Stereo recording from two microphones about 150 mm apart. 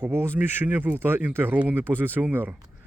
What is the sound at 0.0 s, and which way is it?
Speech, 15° right (ahead or behind).